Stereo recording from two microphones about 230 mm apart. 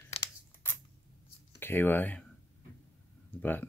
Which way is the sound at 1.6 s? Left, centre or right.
Centre.